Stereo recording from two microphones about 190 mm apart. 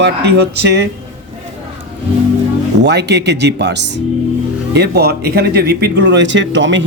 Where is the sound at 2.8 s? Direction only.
60° right (ahead or behind).